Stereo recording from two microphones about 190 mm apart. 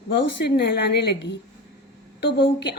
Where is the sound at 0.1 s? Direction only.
65° left (ahead or behind).